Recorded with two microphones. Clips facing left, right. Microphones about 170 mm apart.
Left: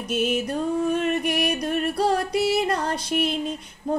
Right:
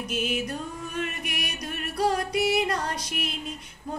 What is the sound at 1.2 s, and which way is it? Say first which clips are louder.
Music: left 11 dB; 35° left (ahead or behind).